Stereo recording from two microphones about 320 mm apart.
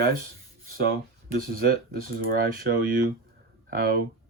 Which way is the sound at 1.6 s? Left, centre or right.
Right.